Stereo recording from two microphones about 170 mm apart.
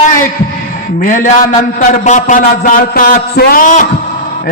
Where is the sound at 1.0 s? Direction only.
50° left (ahead or behind).